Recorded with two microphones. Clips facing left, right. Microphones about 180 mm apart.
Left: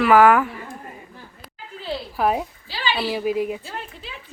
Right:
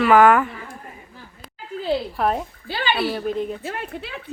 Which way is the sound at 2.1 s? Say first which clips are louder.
Left 6 dB; 5° left (ahead or behind).